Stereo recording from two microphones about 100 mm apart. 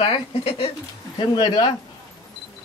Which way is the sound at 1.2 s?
50° left (ahead or behind).